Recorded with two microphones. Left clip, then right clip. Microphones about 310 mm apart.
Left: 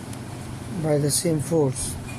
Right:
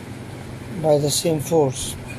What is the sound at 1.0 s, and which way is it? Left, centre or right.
Speech, right.